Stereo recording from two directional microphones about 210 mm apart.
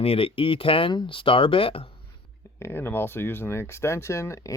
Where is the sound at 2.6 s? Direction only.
10° left (ahead or behind).